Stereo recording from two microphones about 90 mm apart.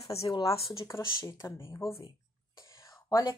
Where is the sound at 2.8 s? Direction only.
40° left (ahead or behind).